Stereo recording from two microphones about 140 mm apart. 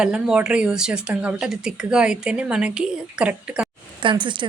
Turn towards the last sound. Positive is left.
turn(degrees=-35)  # may be behind; listen again after turning